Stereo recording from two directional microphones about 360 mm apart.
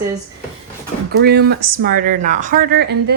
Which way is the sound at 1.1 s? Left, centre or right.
Right.